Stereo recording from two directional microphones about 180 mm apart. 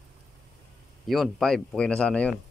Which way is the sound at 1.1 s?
Centre (ahead or behind).